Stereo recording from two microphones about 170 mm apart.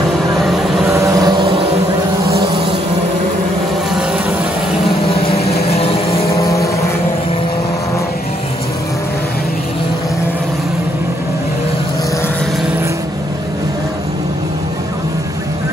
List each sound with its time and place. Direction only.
0.8 s vehicle: 20° right (ahead or behind)
5.2 s vehicle: 35° left (ahead or behind)
6.3 s vehicle: 20° left (ahead or behind)